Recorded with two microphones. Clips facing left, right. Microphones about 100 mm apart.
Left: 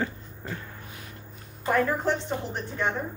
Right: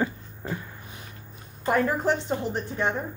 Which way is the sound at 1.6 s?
15° right (ahead or behind).